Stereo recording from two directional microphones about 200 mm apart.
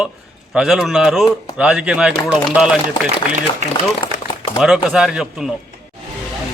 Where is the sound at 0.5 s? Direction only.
5° right (ahead or behind).